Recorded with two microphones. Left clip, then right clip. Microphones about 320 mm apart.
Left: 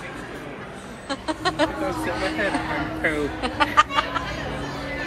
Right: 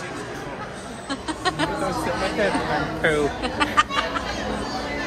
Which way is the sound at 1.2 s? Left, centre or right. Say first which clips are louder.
Left 2 dB; centre.